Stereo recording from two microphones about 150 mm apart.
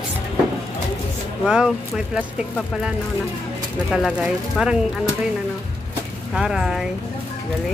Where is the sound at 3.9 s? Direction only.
Centre (ahead or behind).